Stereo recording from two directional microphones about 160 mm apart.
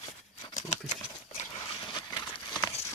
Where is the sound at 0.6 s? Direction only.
45° left (ahead or behind).